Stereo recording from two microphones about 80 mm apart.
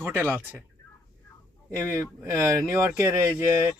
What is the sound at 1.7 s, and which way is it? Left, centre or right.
Speech, right.